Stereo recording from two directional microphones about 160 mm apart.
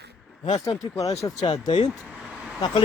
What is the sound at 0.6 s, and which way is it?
Speech, 20° left (ahead or behind).